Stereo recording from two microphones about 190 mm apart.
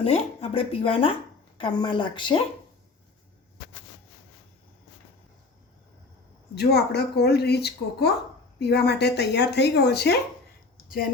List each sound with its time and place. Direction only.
0.0 s speech: 30° left (ahead or behind)
6.5 s speech: 60° left (ahead or behind)